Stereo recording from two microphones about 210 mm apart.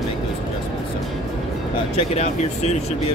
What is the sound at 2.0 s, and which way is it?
Speech, 30° left (ahead or behind).